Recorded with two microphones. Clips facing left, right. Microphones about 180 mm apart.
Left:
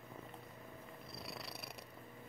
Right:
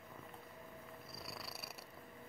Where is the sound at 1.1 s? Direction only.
Centre (ahead or behind).